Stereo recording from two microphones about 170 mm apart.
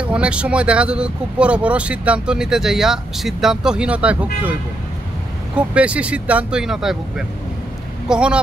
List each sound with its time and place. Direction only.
0.0 s speech: 5° right (ahead or behind)
5.8 s speech: 5° right (ahead or behind)